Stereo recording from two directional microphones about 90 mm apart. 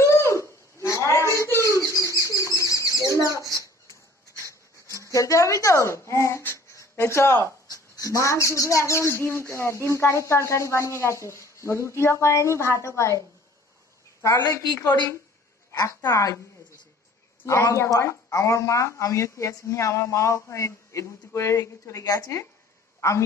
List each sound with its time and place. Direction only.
0.0 s a sound: 35° left (ahead or behind)
1.3 s bird: 35° left (ahead or behind)
3.5 s a sound: 35° left (ahead or behind)
5.0 s speech: 35° left (ahead or behind)
7.7 s speech: 45° left (ahead or behind)
14.2 s speech: 40° left (ahead or behind)
16.0 s speech: 40° left (ahead or behind)
17.5 s speech: 35° left (ahead or behind)
22.9 s a sound: 35° left (ahead or behind)